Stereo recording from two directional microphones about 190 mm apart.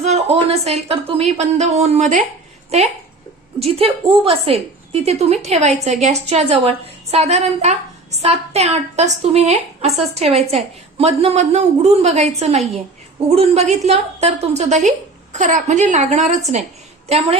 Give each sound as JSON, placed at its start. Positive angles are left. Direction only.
{"t": 0.0, "sound": "a woman's voice", "side_deg": -35}